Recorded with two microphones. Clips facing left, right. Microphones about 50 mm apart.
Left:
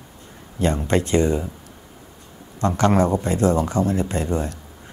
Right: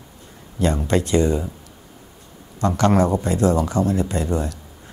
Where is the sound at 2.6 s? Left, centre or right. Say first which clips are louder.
Right 1 dB; left.